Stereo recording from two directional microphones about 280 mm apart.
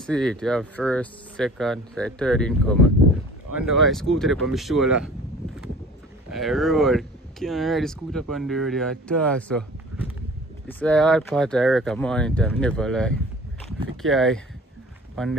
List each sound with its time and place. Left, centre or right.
0.0 s speech: centre
6.3 s speech: centre